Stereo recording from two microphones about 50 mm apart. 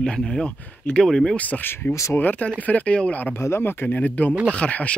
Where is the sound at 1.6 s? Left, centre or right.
Left.